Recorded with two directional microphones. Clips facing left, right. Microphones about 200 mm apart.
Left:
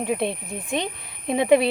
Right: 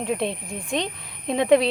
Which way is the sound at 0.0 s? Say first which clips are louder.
Left 1 dB; 5° left (ahead or behind).